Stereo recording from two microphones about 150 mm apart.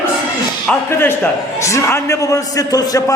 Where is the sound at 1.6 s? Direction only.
20° left (ahead or behind).